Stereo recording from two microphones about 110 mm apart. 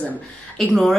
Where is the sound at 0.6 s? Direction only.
Centre (ahead or behind).